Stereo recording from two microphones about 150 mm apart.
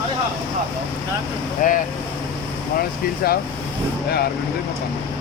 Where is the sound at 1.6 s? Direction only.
60° left (ahead or behind).